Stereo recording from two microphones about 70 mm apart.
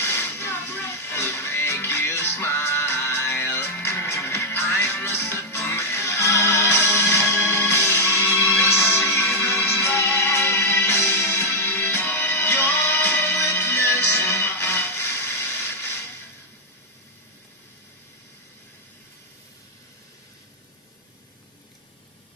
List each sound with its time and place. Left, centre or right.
0.0 s music: left